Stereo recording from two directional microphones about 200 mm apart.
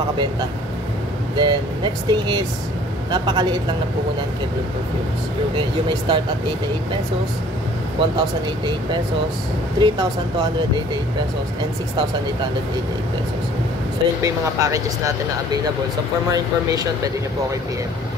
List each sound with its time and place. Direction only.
1.3 s speech: 20° right (ahead or behind)
5.6 s speech: 25° right (ahead or behind)
8.0 s speech: 25° right (ahead or behind)
14.2 s speech: 15° right (ahead or behind)